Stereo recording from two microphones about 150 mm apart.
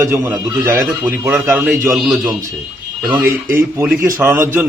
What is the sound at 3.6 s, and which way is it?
A man's voice, 15° right (ahead or behind).